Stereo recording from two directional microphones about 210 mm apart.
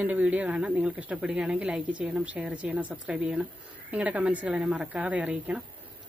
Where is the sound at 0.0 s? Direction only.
10° right (ahead or behind).